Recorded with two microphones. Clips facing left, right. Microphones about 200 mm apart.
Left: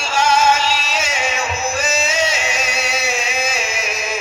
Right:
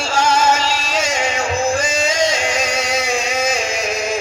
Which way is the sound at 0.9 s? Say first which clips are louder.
Right 3 dB; 5° left (ahead or behind).